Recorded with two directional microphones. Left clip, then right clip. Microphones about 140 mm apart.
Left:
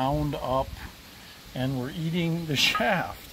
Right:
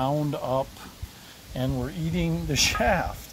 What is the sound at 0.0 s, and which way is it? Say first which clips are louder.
Stir: right 1 dB; 5° right (ahead or behind).